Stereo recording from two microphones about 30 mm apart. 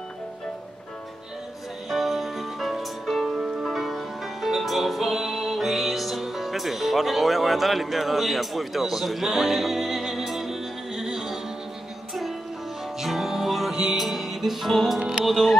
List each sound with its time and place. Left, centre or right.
1.9 s music: centre
3.3 s music: centre
3.7 s music: centre
15.2 s speech: centre